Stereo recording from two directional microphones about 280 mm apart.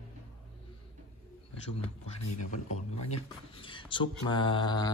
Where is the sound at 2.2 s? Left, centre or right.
Left.